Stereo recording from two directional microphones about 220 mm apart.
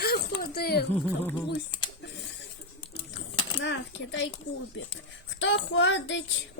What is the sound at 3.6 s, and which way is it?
Speech, 55° left (ahead or behind).